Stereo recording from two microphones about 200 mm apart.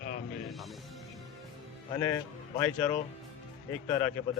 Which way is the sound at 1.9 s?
15° left (ahead or behind).